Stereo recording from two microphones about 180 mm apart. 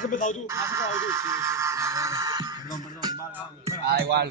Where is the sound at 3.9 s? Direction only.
65° right (ahead or behind).